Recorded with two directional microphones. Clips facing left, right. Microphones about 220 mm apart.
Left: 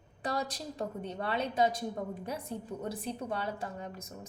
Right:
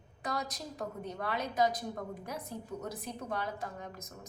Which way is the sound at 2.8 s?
30° left (ahead or behind).